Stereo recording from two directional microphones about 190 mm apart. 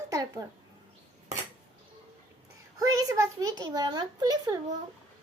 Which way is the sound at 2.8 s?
20° right (ahead or behind).